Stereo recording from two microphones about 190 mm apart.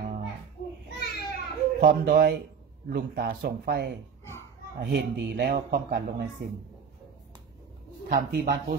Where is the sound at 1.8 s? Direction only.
55° right (ahead or behind).